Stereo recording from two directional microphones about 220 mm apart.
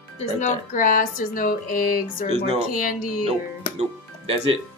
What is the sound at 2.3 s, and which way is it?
Speech, 25° right (ahead or behind).